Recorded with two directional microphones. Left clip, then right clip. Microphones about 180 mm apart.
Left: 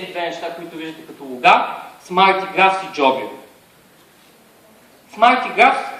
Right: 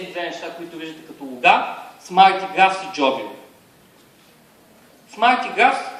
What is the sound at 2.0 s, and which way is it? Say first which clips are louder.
A man's voice: right 1 dB; 45° right (ahead or behind).